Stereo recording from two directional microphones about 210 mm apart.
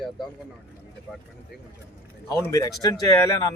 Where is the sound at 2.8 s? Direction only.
20° left (ahead or behind).